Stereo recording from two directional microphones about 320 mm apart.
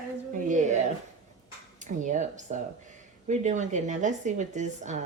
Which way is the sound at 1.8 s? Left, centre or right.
Right.